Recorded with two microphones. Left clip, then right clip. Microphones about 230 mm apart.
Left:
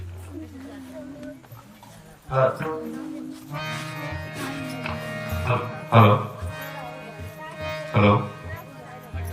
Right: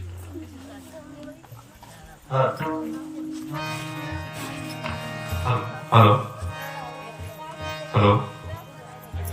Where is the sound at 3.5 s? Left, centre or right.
Right.